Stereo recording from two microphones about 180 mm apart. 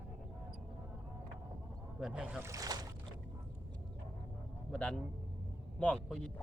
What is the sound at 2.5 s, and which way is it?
Boat, 20° right (ahead or behind).